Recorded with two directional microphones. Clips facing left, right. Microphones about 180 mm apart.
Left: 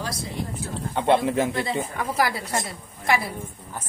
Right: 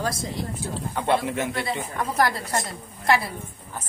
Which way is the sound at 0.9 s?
25° left (ahead or behind).